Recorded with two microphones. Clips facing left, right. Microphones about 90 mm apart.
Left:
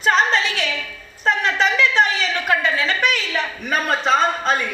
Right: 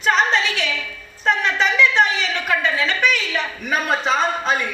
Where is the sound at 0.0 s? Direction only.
35° left (ahead or behind).